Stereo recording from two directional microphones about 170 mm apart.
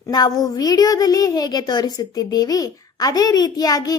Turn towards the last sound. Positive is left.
turn(degrees=20)  # may be behind; listen again after turning